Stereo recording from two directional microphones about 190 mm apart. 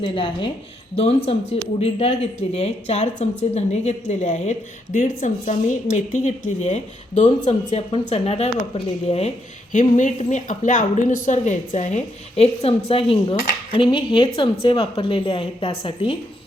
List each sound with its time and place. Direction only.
0.0 s a woman's voice: 25° left (ahead or behind)